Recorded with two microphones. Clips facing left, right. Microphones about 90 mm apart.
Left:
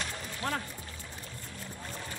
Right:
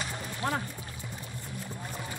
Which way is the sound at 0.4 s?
20° right (ahead or behind).